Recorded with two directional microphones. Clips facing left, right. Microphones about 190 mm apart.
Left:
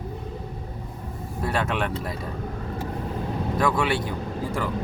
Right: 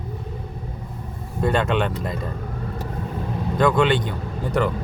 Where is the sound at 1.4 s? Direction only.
5° left (ahead or behind).